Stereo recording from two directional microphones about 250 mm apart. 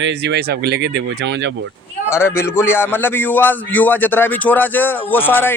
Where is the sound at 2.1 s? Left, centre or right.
Centre.